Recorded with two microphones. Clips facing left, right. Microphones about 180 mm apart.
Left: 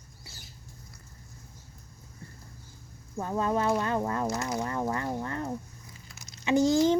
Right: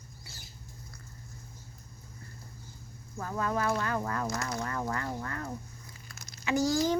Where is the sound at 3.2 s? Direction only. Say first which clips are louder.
Left 4 dB; 25° left (ahead or behind).